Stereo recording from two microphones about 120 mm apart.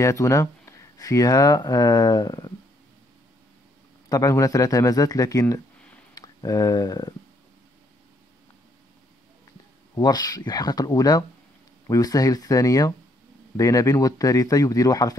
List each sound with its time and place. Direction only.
0.0 s speech: 25° left (ahead or behind)
4.1 s speech: 30° left (ahead or behind)
9.9 s speech: 35° left (ahead or behind)